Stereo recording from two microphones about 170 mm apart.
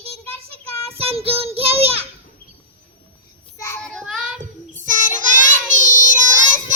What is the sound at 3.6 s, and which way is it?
Child singing, 15° left (ahead or behind).